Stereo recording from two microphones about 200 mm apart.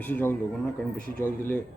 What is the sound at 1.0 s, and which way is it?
Speech, 45° right (ahead or behind).